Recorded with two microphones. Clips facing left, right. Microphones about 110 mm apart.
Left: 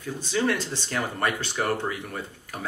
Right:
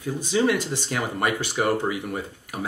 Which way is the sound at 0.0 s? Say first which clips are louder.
Right 4 dB; 15° right (ahead or behind).